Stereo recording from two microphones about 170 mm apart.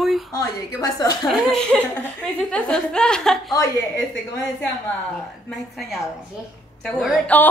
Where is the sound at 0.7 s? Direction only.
20° left (ahead or behind).